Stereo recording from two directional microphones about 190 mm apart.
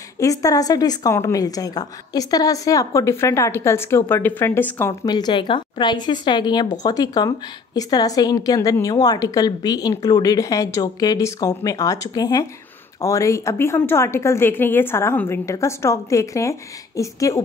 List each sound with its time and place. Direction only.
0.2 s a woman's voice: 15° left (ahead or behind)